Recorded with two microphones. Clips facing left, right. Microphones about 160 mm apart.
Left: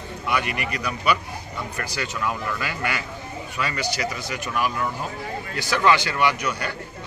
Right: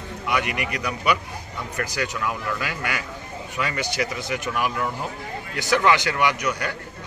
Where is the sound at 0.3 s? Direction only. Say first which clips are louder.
Right 1 dB; 15° right (ahead or behind).